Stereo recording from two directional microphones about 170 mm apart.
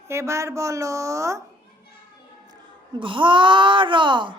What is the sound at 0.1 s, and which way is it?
Speech, 15° right (ahead or behind).